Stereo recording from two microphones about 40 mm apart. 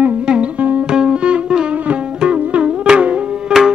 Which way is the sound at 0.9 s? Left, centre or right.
Right.